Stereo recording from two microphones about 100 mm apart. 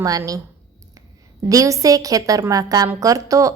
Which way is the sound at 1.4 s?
35° right (ahead or behind).